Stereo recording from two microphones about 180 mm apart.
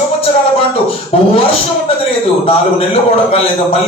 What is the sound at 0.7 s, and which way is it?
A man's voice, 35° left (ahead or behind).